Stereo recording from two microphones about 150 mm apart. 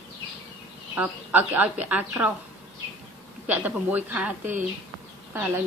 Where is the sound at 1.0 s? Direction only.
10° right (ahead or behind).